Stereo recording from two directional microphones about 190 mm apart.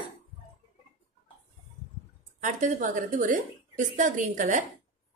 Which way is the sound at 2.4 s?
40° right (ahead or behind).